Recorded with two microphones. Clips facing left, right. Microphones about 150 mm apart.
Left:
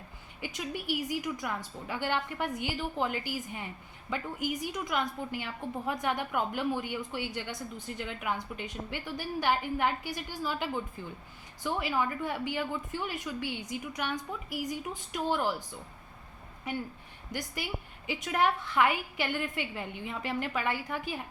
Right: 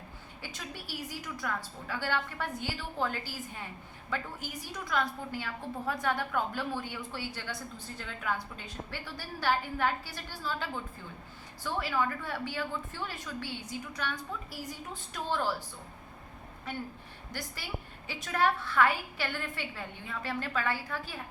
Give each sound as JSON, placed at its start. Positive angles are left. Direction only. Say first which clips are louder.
{"t": 0.4, "sound": "a woman's voice", "louder": "left 9 dB", "side_deg": 15}
{"t": 16.7, "sound": "a woman's voice", "louder": "left 3 dB", "side_deg": 15}